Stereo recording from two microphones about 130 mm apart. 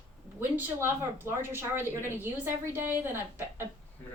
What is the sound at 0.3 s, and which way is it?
A woman's voice, 15° right (ahead or behind).